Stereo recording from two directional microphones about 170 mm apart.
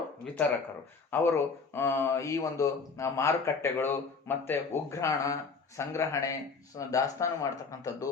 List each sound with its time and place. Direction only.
1.1 s a man's voice: 15° left (ahead or behind)